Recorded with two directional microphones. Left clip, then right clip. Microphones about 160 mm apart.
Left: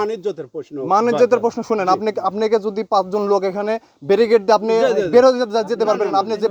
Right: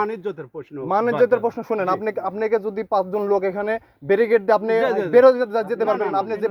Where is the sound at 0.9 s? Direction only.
25° left (ahead or behind).